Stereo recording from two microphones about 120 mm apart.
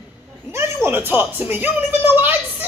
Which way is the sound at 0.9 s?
15° right (ahead or behind).